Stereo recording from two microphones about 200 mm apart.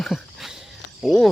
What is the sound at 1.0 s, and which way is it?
Speech, centre (ahead or behind).